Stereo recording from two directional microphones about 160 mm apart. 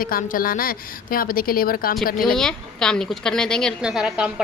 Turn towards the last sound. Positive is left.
turn(degrees=-5)  # may be behind; listen again after turning